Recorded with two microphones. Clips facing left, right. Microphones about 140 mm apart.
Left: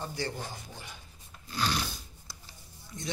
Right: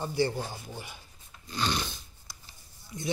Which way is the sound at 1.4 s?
5° left (ahead or behind).